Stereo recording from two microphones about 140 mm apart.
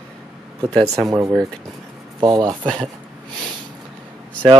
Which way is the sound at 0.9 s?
25° right (ahead or behind).